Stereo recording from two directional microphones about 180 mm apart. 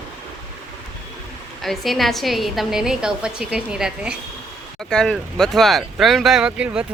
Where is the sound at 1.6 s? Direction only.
Centre (ahead or behind).